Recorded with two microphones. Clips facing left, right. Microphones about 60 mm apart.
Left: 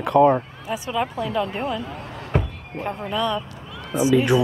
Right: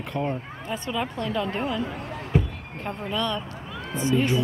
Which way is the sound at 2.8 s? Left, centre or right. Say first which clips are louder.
Left 4 dB; centre.